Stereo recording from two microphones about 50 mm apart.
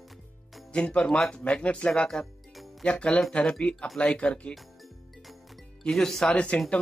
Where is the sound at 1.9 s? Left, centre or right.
Centre.